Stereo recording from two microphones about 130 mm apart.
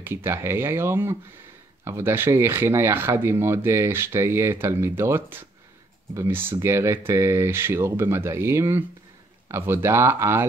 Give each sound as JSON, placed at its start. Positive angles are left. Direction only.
{"t": 0.0, "sound": "speech", "side_deg": -15}